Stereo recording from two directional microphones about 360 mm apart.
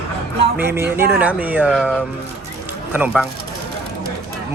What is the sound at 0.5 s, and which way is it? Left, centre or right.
A man's voice, centre.